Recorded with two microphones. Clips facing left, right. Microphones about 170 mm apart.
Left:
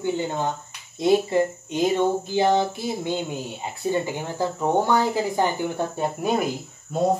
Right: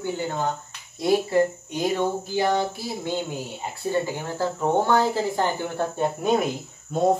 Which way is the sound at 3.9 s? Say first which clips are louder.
Left 1 dB; 15° left (ahead or behind).